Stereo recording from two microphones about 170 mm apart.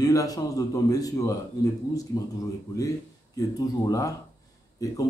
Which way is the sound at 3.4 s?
20° left (ahead or behind).